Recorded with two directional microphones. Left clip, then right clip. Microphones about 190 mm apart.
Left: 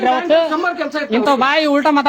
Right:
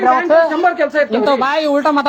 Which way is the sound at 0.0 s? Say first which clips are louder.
Right 3 dB; 25° left (ahead or behind).